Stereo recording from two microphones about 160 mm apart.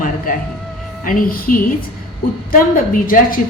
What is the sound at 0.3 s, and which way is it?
A woman's voice, 60° left (ahead or behind).